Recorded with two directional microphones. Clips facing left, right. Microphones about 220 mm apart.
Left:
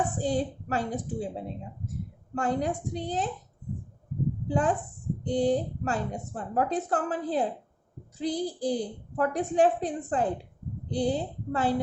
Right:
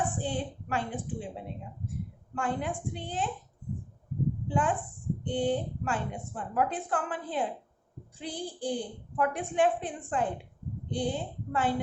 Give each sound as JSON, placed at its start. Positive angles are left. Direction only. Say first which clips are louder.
{"t": 0.1, "sound": "a woman's voice", "louder": "left 5 dB", "side_deg": 40}
{"t": 4.4, "sound": "a woman's voice", "louder": "left 4 dB", "side_deg": 40}